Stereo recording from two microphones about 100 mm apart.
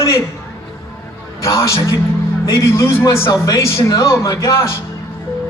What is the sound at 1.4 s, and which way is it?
A man's voice, 30° left (ahead or behind).